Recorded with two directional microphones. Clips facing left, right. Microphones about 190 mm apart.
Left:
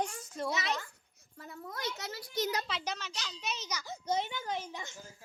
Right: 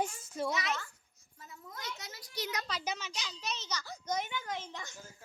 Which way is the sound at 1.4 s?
65° left (ahead or behind).